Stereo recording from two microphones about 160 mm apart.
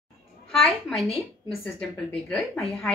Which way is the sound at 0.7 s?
Centre (ahead or behind).